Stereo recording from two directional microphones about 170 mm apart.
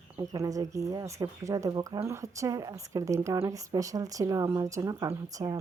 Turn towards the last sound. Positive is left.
turn(degrees=-20)  # may be behind; listen again after turning